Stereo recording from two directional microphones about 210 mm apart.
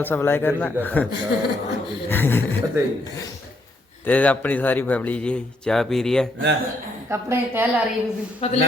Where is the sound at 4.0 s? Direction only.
5° left (ahead or behind).